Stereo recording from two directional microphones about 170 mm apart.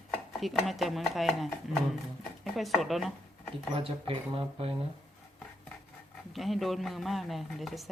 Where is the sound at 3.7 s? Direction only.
35° right (ahead or behind).